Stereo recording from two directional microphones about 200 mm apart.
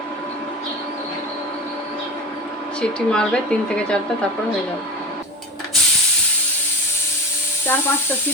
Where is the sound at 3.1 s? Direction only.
5° left (ahead or behind).